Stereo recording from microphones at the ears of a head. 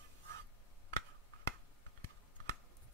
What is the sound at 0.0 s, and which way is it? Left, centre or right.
Finger snapping, right.